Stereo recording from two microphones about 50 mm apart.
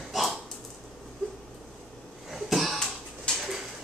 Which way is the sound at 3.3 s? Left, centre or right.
Centre.